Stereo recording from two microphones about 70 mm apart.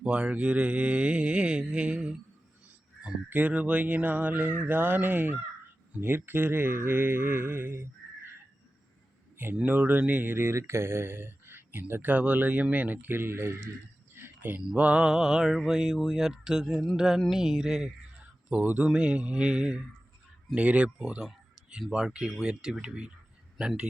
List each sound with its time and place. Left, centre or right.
0.0 s mantra: centre
3.2 s speech: right
9.6 s speech: right
14.1 s a sound: right
14.6 s mantra: centre
18.4 s speech: right
18.9 s mantra: centre
20.6 s speech: centre
21.9 s mantra: centre